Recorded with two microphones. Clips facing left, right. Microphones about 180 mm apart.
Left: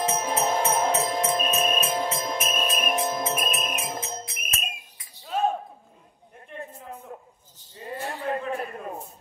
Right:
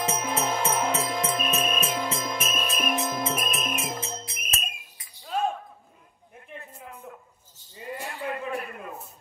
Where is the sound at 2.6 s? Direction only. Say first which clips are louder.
Left 1 dB; 45° left (ahead or behind).